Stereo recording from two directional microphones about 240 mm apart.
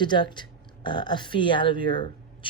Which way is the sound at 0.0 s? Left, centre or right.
Centre.